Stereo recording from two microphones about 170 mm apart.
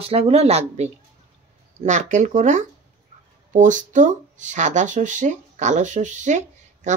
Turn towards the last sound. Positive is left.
turn(degrees=-45)  # may be behind; listen again after turning